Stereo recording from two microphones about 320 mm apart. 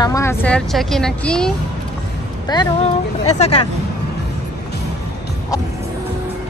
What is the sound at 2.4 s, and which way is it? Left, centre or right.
Speech, centre.